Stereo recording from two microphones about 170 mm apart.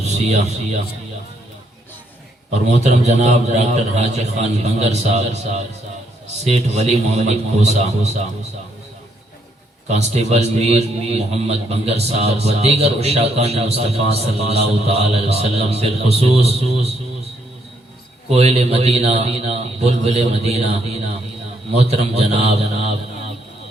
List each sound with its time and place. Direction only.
0.1 s a man's voice: 40° right (ahead or behind)
2.5 s a man's voice: 40° right (ahead or behind)
6.4 s a man's voice: 40° right (ahead or behind)
9.9 s a man's voice: 40° right (ahead or behind)
14.0 s a man's voice: 35° left (ahead or behind)
14.5 s a man's voice: 35° right (ahead or behind)
18.3 s a man's voice: 40° right (ahead or behind)